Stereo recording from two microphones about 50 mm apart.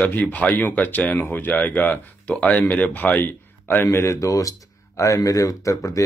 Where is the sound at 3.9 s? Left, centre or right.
Left.